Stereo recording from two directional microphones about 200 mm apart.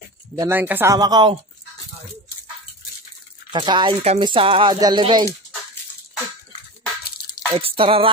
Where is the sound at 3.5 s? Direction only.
25° right (ahead or behind).